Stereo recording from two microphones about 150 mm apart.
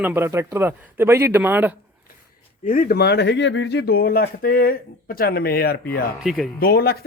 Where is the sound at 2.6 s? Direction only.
70° left (ahead or behind); by 5.9 s 90° left.